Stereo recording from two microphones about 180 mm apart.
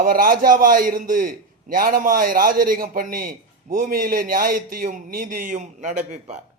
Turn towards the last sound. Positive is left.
turn(degrees=-45)  # may be behind; listen again after turning